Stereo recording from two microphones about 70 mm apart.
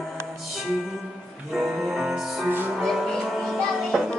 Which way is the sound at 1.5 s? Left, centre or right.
Centre.